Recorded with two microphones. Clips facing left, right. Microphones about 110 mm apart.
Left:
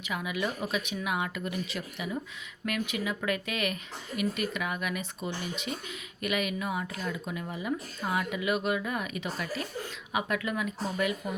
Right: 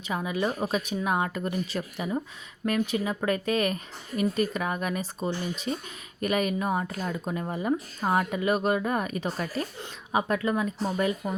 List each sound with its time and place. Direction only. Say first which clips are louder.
0.1 s speech: right 4 dB; 35° right (ahead or behind)